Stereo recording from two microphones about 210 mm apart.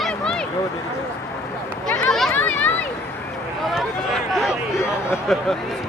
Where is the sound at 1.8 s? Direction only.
5° left (ahead or behind).